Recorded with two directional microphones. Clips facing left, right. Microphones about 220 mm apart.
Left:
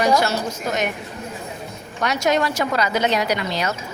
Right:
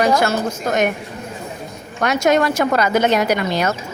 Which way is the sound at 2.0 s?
50° right (ahead or behind).